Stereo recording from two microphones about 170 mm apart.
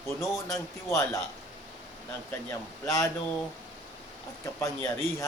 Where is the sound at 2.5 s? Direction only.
15° left (ahead or behind).